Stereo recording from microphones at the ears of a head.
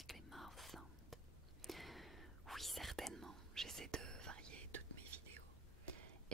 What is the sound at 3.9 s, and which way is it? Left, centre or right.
Whispering, right.